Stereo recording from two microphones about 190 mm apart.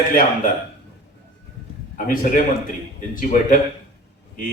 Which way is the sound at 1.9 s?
45° left (ahead or behind).